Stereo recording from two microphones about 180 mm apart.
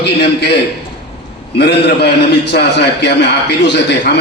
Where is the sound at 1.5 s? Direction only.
70° left (ahead or behind).